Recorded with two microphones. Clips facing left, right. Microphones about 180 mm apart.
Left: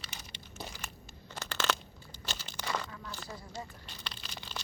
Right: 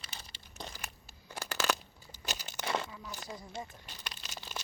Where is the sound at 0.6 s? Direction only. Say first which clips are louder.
Even; 5° left (ahead or behind).